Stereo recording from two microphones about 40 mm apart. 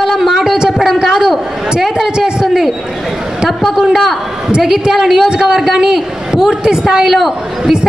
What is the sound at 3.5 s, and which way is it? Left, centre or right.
A man's voice, centre.